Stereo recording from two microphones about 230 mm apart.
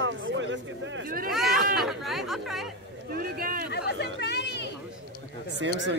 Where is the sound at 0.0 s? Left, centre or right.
Right.